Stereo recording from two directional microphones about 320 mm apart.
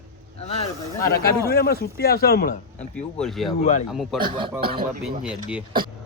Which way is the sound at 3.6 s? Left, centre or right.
Left.